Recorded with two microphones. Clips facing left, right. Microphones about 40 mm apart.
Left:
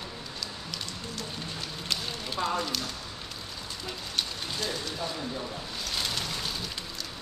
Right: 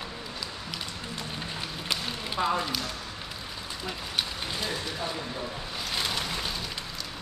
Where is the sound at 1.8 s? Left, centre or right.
Centre.